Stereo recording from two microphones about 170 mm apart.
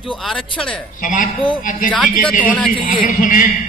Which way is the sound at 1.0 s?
50° left (ahead or behind).